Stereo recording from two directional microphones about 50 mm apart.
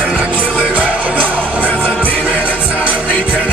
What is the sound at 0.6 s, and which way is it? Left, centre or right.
Music, right.